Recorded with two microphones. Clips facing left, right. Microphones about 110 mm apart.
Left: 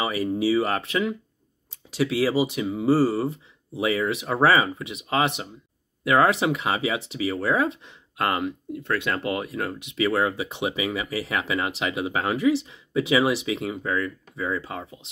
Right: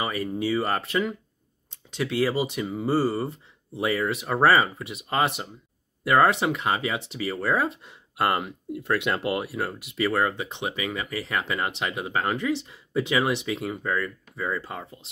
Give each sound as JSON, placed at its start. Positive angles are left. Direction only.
{"t": 0.0, "sound": "speech", "side_deg": 5}